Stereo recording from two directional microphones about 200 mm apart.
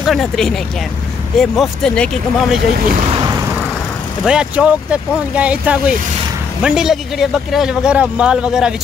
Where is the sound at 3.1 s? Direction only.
20° right (ahead or behind).